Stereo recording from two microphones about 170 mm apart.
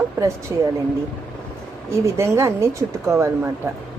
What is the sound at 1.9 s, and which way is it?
A woman's voice, 15° right (ahead or behind).